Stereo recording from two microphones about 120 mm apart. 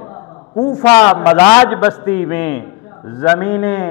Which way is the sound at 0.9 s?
15° left (ahead or behind).